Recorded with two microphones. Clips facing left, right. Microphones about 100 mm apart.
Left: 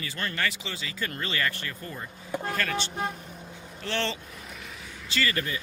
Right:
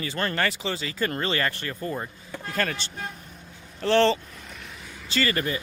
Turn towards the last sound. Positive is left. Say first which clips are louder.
# right 3 dB
turn(degrees=-40)  # may be behind; listen again after turning